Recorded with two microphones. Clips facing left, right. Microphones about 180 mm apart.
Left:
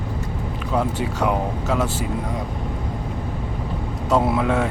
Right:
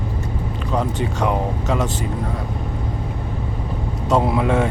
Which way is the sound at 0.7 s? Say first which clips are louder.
Even; 5° left (ahead or behind).